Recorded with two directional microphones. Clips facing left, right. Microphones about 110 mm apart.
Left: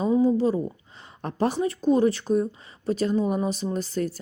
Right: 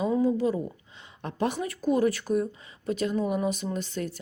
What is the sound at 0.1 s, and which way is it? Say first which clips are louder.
Speech: left 7 dB; 30° left (ahead or behind).